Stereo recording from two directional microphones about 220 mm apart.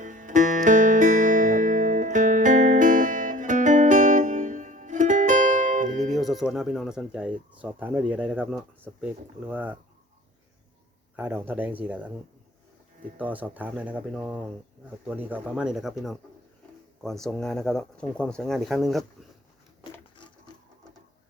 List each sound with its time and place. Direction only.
0.0 s music: 35° right (ahead or behind)
6.1 s speech: centre (ahead or behind)
11.2 s speech: 10° right (ahead or behind)
13.1 s speech: 5° right (ahead or behind)
19.8 s a sound: 20° left (ahead or behind)